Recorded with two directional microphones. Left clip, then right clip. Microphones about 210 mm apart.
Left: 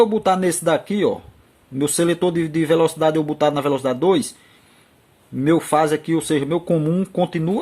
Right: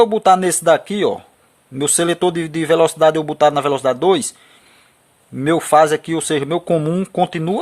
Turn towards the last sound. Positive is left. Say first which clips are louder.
# right 3 dB
turn(degrees=-45)  # may be behind; listen again after turning